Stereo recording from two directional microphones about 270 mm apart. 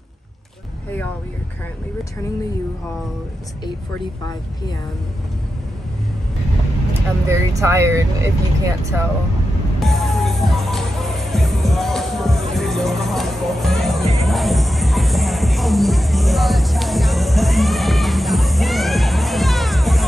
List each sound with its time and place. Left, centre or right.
7.2 s speech: centre
9.8 s music: centre